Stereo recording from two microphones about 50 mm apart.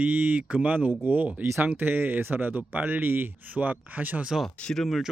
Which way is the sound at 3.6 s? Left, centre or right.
Right.